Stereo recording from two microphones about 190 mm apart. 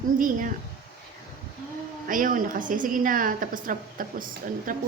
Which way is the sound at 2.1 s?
45° right (ahead or behind).